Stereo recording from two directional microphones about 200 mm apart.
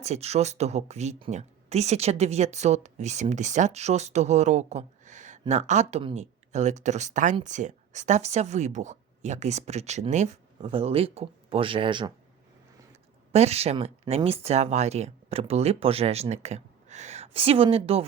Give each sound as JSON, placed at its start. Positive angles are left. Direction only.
{"t": 0.0, "sound": "speech", "side_deg": -30}
{"t": 13.3, "sound": "speech", "side_deg": -30}